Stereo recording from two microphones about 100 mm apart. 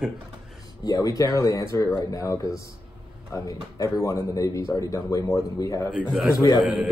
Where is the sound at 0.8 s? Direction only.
40° left (ahead or behind).